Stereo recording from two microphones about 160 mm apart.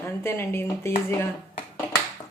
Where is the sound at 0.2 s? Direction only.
15° left (ahead or behind).